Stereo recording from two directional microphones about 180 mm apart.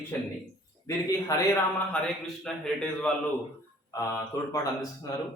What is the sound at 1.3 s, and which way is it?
Speech, 20° left (ahead or behind).